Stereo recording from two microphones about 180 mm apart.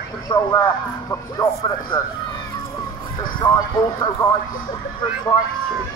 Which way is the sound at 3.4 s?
25° left (ahead or behind).